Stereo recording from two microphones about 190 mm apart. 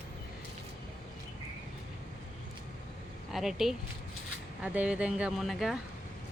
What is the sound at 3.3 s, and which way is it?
Speech, centre (ahead or behind).